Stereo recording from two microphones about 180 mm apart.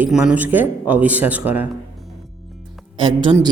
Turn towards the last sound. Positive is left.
turn(degrees=-25)  # may be behind; listen again after turning